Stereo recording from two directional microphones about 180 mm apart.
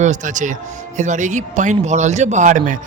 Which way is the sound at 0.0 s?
45° right (ahead or behind).